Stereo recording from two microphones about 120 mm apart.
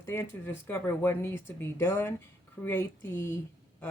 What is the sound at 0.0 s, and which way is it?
Speech, 20° left (ahead or behind).